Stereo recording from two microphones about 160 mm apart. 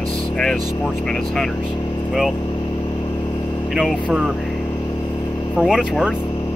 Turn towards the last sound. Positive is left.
turn(degrees=-5)  # may be behind; listen again after turning